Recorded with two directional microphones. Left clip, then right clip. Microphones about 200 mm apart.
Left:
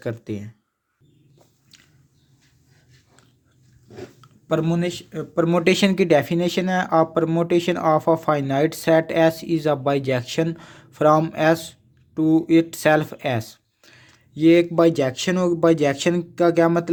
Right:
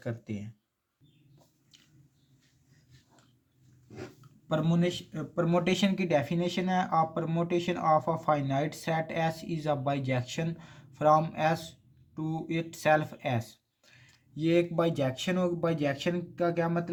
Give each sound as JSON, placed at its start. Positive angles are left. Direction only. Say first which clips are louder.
{"t": 0.0, "sound": "speech", "louder": "left 10 dB", "side_deg": 35}
{"t": 4.4, "sound": "speech", "louder": "left 8 dB", "side_deg": 40}